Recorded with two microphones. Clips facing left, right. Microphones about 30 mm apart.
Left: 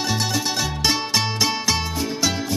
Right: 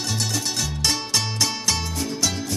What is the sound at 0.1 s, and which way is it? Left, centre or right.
Music, centre.